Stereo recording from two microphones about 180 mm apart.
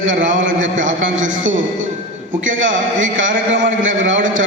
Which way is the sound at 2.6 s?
90° right.